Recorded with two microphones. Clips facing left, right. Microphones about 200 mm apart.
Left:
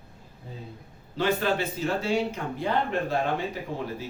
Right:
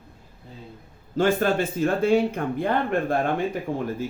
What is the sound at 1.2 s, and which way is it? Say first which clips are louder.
A man's voice: right 4 dB; 50° right (ahead or behind).